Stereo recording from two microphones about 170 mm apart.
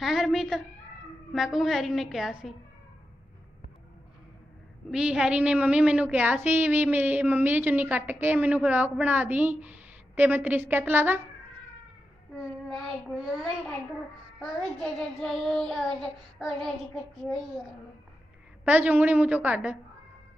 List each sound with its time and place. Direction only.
0.0 s a woman's voice: centre (ahead or behind)
1.3 s child singing: centre (ahead or behind)
4.9 s a woman's voice: 5° right (ahead or behind)
14.4 s child singing: centre (ahead or behind)
18.6 s a woman's voice: 10° right (ahead or behind)